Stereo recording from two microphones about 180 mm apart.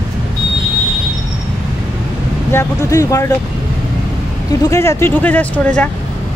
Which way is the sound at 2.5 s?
15° left (ahead or behind).